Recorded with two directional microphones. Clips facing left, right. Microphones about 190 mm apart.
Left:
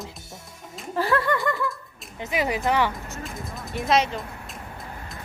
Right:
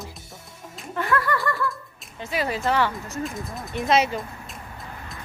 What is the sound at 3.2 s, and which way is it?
Speech, centre (ahead or behind).